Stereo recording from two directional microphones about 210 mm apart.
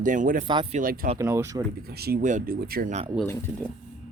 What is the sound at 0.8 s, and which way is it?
Speech, 40° right (ahead or behind).